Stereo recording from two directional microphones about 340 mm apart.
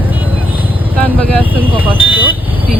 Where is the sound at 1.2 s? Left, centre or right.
Centre.